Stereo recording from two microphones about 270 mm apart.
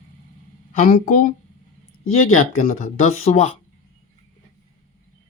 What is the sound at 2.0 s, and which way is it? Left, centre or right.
Speech, left.